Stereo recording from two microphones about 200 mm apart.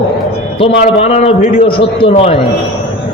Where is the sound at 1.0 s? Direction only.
30° left (ahead or behind).